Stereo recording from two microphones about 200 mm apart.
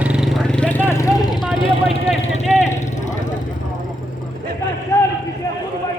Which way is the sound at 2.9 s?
40° left (ahead or behind).